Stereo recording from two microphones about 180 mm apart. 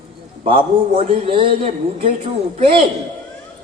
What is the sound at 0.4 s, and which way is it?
A man's voice, 30° right (ahead or behind).